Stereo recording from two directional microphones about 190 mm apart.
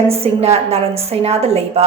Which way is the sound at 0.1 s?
30° right (ahead or behind).